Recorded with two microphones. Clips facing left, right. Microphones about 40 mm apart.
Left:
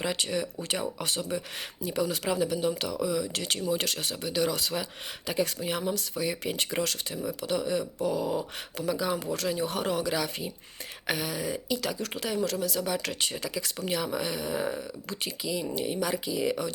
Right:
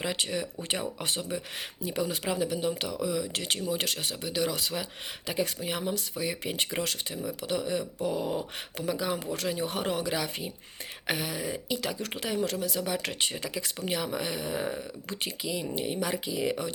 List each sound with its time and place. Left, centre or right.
0.0 s speech: centre
0.7 s speech: right
8.1 s dog: right
8.9 s speech: right
15.1 s speech: right